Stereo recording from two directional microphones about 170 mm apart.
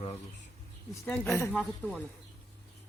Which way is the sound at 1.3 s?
15° left (ahead or behind).